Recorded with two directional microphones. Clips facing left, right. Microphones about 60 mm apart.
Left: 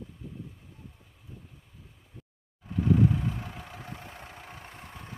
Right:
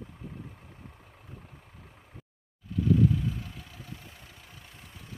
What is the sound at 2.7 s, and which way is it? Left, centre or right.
Vehicle, left.